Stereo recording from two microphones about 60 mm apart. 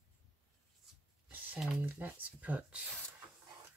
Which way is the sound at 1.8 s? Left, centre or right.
Right.